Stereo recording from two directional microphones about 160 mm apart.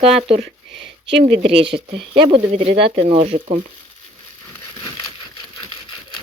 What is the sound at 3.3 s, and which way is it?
Frying, 45° right (ahead or behind).